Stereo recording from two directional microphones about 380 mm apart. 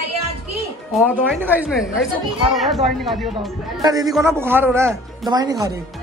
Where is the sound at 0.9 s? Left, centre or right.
Centre.